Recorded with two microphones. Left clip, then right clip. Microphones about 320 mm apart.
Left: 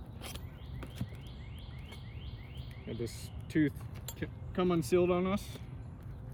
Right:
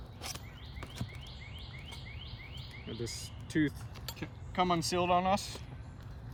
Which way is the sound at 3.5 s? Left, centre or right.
Centre.